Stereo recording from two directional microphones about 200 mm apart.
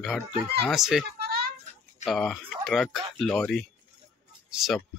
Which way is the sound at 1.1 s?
50° right (ahead or behind).